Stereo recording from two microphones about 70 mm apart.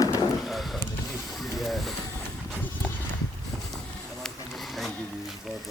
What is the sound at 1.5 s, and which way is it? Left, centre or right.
Vehicle, centre.